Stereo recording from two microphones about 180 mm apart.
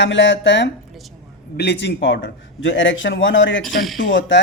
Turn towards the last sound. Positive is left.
turn(degrees=90)